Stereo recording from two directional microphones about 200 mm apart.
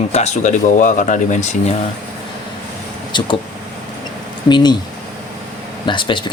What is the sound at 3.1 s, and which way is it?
Speech, 25° left (ahead or behind).